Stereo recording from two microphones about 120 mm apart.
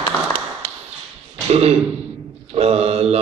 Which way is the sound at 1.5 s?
55° right (ahead or behind).